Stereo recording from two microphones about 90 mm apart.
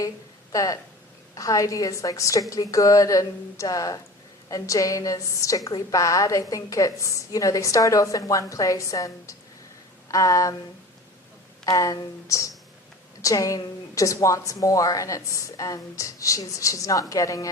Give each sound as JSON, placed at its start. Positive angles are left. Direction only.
{"t": 0.5, "sound": "a woman's voice", "side_deg": 40}
{"t": 10.1, "sound": "a sound", "side_deg": 40}
{"t": 11.6, "sound": "a woman's voice", "side_deg": 40}